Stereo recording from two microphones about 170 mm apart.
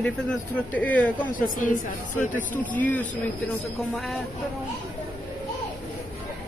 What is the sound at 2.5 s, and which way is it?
Speech, 10° left (ahead or behind).